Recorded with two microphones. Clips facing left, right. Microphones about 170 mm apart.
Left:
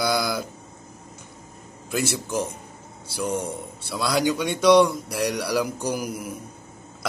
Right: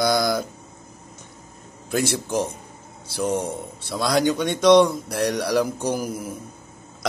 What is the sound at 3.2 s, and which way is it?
Speech, 50° right (ahead or behind).